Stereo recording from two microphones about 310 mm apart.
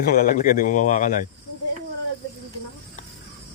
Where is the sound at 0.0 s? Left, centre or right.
Left.